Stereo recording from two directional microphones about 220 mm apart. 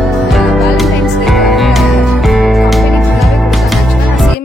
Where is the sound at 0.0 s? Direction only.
Centre (ahead or behind).